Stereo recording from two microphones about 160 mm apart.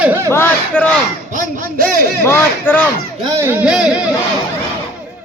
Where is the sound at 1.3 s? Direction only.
55° right (ahead or behind).